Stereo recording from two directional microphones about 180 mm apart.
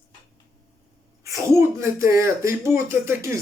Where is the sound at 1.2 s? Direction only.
15° right (ahead or behind).